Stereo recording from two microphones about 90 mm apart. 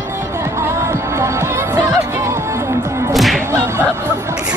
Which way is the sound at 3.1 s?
Centre (ahead or behind).